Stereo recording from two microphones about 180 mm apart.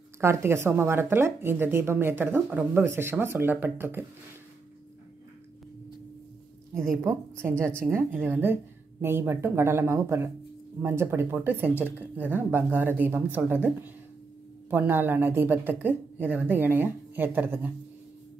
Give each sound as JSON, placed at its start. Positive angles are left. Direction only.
{"t": 0.2, "sound": "speech", "side_deg": -15}
{"t": 7.1, "sound": "speech", "side_deg": -15}